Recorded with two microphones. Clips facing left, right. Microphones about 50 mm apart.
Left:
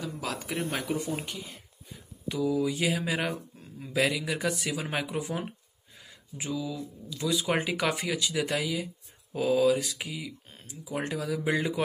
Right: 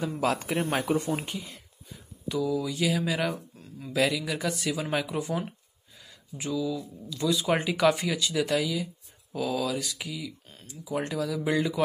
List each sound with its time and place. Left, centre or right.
0.0 s speech: right
0.3 s speech: right
2.2 s speech: centre
7.2 s speech: centre